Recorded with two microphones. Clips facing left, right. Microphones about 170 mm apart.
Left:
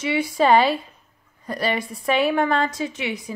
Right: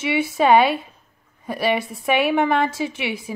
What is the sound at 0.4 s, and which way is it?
Speech, centre (ahead or behind).